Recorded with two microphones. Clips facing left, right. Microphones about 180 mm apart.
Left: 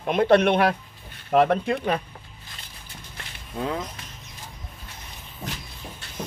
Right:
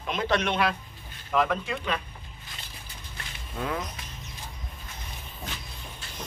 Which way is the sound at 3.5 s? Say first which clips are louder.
Left 3 dB; 25° left (ahead or behind).